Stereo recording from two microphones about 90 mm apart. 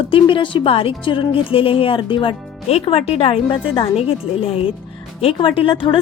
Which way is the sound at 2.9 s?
90° left.